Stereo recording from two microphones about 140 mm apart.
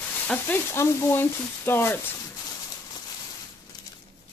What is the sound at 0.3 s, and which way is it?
Speech, 15° left (ahead or behind).